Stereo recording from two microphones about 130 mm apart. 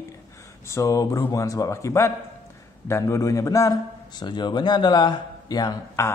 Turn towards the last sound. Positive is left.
turn(degrees=25)  # may be behind; listen again after turning